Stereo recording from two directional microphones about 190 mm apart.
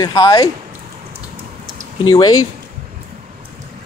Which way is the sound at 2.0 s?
20° left (ahead or behind).